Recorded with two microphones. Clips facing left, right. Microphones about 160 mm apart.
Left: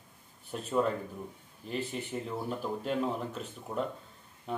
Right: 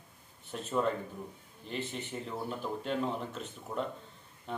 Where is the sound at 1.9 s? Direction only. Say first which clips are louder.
Left 3 dB; 5° left (ahead or behind).